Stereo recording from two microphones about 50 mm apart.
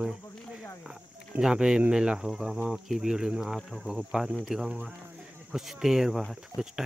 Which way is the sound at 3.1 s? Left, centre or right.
Centre.